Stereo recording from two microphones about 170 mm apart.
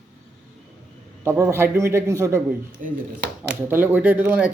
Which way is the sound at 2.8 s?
50° right (ahead or behind).